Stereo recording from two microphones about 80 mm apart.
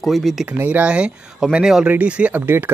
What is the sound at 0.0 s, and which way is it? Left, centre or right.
Speech, centre.